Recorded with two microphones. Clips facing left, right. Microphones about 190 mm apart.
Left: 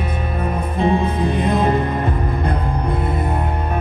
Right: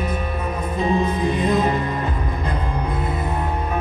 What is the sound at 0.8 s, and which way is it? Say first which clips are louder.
Music: left 2 dB; 55° left (ahead or behind).